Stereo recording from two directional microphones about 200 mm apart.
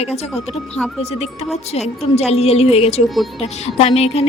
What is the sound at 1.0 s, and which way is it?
Speech, 30° left (ahead or behind).